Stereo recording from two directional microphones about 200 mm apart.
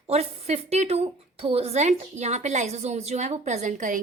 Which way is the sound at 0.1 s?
30° right (ahead or behind).